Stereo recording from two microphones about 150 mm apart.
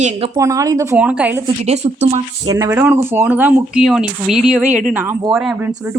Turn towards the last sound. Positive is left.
turn(degrees=-5)  # may be behind; listen again after turning